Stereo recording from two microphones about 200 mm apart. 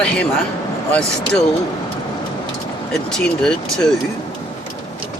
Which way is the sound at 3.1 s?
5° left (ahead or behind).